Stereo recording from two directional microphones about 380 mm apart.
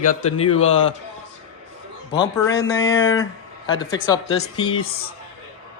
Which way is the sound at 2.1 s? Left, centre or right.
Centre.